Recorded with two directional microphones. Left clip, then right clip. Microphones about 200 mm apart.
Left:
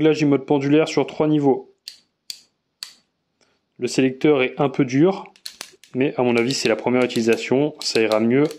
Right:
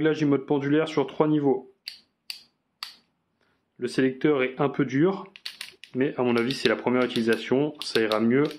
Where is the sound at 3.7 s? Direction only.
30° left (ahead or behind).